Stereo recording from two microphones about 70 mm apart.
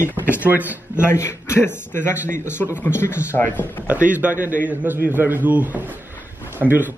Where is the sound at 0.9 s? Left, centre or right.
Left.